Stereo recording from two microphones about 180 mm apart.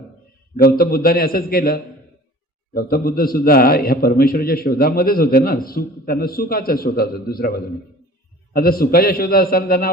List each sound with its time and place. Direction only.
0.5 s a man's voice: 55° left (ahead or behind)
8.5 s a man's voice: 55° left (ahead or behind)